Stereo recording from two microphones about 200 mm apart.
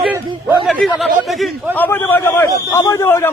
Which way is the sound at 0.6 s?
Centre (ahead or behind).